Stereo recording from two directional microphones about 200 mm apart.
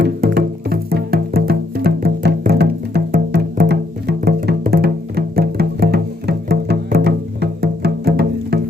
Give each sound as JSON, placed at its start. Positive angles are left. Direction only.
{"t": 0.0, "sound": "music", "side_deg": -50}